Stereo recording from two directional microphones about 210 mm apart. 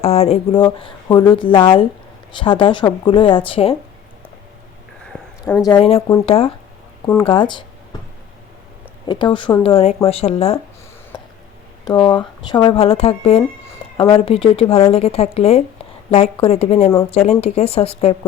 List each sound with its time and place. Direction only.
0.0 s speech: 30° left (ahead or behind)
5.1 s a sound: 5° left (ahead or behind)
5.6 s speech: 25° left (ahead or behind)
7.9 s a sound: 20° left (ahead or behind)
9.0 s speech: 20° left (ahead or behind)
11.9 s speech: 20° left (ahead or behind)